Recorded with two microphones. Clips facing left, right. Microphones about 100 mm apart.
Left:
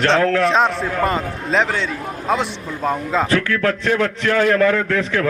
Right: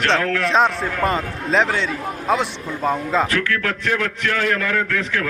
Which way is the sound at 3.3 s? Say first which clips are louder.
Left 4 dB; 30° left (ahead or behind).